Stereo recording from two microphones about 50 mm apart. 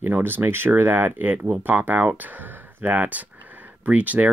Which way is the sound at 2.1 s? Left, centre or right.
Right.